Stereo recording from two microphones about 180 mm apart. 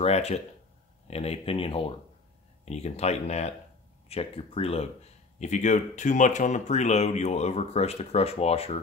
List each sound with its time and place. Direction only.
0.0 s speech: 35° left (ahead or behind)